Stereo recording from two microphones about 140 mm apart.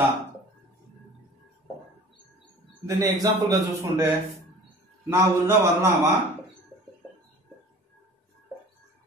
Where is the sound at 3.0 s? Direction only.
25° right (ahead or behind).